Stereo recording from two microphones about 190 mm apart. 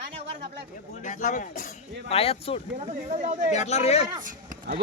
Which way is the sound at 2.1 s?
30° left (ahead or behind).